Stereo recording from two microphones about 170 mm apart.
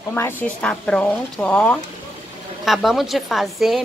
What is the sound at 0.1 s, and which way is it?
A woman's voice, 10° left (ahead or behind).